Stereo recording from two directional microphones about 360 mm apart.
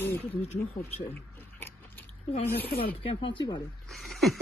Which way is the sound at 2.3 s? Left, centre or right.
Left.